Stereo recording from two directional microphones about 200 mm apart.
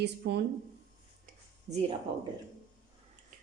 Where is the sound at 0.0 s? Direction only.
55° right (ahead or behind).